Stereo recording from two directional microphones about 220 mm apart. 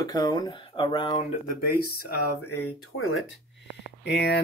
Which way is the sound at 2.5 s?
65° left (ahead or behind).